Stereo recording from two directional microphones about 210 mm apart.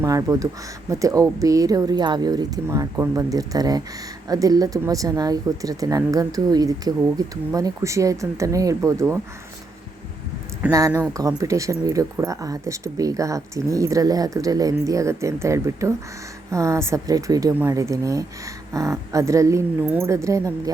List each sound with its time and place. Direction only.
0.0 s speech: 15° right (ahead or behind)
10.7 s speech: 15° right (ahead or behind)